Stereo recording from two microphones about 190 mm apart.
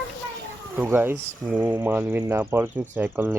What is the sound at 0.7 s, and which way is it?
Speech, 10° right (ahead or behind).